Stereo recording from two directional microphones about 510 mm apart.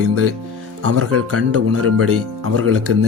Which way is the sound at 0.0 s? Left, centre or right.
Right.